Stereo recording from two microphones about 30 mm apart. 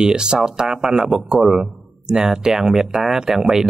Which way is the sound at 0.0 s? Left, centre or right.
Right.